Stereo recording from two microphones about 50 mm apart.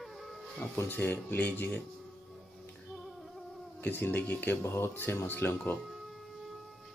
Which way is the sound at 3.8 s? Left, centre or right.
Left.